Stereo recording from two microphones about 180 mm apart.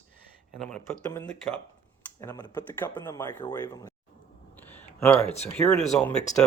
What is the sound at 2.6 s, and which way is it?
Speech, 10° left (ahead or behind).